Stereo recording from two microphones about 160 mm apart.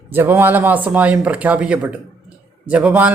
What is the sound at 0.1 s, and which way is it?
A man's voice, 15° right (ahead or behind).